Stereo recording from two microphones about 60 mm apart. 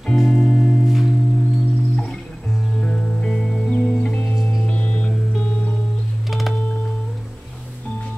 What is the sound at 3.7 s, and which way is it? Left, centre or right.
Music, centre.